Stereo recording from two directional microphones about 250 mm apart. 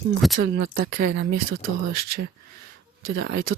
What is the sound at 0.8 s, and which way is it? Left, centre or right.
Speech, right.